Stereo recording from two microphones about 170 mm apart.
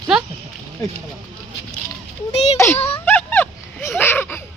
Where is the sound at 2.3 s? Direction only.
40° left (ahead or behind).